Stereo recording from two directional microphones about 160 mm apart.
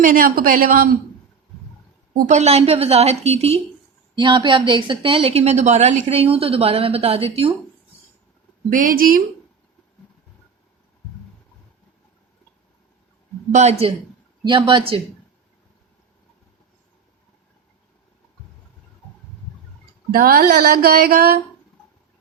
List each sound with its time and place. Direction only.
0.0 s a woman's voice: 60° right (ahead or behind)
2.2 s a woman's voice: 45° right (ahead or behind)
4.1 s a woman's voice: 30° right (ahead or behind)
8.7 s a woman's voice: 60° right (ahead or behind)
13.5 s speech: 45° right (ahead or behind)
14.4 s a woman's voice: 30° right (ahead or behind)
20.1 s speech: 65° right (ahead or behind)